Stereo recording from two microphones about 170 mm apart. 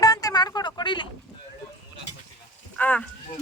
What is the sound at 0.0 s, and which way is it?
Vehicle, 20° left (ahead or behind).